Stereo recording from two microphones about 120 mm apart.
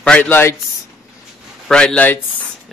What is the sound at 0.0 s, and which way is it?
Speech, 10° left (ahead or behind).